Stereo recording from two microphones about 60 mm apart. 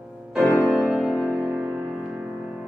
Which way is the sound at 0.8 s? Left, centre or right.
Centre.